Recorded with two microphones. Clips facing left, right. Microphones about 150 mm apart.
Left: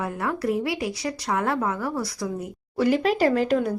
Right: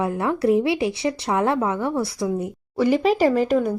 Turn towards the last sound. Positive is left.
turn(degrees=-10)  # may be behind; listen again after turning